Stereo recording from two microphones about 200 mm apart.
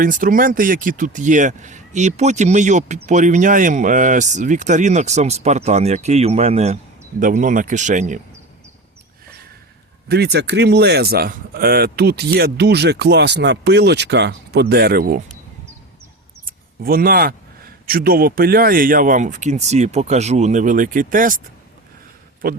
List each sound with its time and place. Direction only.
0.0 s speech: 45° right (ahead or behind)
10.1 s speech: 55° right (ahead or behind)
16.5 s speech: 45° right (ahead or behind)
22.4 s a man's voice: 45° right (ahead or behind)